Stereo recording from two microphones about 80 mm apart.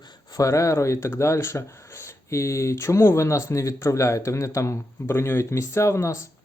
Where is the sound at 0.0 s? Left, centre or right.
Left.